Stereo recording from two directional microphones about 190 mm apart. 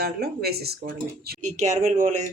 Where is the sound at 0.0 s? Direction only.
55° right (ahead or behind).